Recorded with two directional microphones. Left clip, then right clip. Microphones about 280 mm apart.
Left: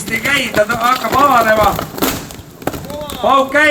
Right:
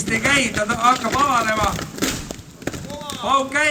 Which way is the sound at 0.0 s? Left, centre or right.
Centre.